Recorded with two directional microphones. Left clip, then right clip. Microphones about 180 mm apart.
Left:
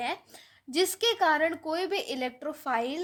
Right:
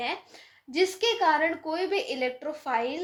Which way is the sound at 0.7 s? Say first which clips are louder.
Right 1 dB; 55° left (ahead or behind).